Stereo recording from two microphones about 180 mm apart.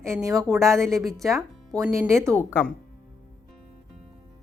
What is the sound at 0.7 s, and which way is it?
Speech, centre (ahead or behind).